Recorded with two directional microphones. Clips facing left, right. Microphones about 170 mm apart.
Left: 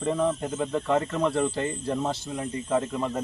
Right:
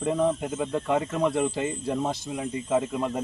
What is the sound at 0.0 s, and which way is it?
Speech, 10° right (ahead or behind).